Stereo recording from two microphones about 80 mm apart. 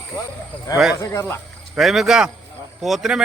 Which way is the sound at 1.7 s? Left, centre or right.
Centre.